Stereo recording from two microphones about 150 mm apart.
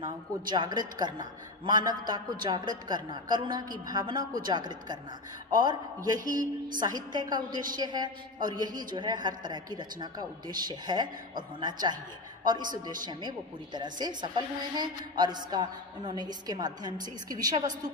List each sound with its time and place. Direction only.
0.0 s a woman's voice: 30° right (ahead or behind)
13.7 s a woman's voice: 30° right (ahead or behind)